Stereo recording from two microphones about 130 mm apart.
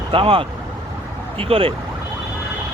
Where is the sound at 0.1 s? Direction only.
45° right (ahead or behind).